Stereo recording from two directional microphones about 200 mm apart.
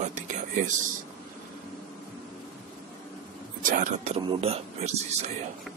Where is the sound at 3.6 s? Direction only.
40° right (ahead or behind).